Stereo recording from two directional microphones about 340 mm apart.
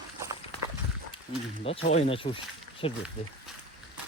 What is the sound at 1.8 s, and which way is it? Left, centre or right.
Speech, centre.